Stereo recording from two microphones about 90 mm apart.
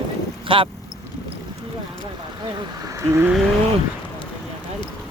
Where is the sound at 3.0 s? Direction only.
30° right (ahead or behind).